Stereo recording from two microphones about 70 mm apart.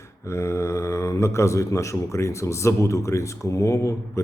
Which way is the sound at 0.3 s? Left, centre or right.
Left.